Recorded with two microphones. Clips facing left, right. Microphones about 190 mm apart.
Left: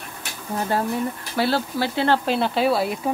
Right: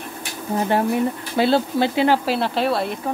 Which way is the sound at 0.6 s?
20° right (ahead or behind).